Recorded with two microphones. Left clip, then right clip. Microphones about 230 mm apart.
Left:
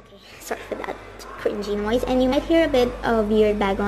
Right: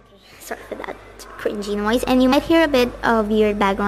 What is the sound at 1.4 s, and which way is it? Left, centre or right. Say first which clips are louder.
A woman's voice: right 1 dB; centre.